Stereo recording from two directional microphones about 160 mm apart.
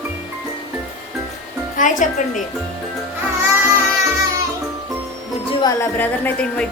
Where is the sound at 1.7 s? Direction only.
55° left (ahead or behind).